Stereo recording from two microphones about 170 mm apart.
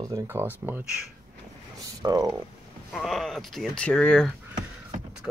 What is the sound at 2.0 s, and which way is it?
Speech, 20° right (ahead or behind).